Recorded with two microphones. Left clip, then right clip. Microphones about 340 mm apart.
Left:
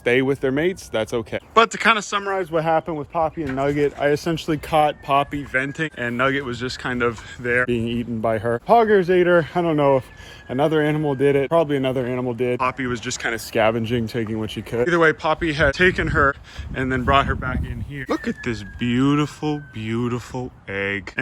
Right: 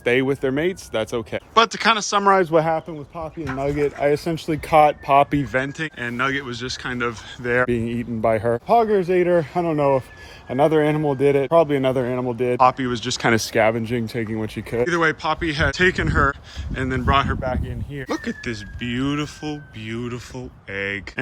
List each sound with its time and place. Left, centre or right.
0.0 s speech: centre
2.3 s speech: right
2.6 s speech: centre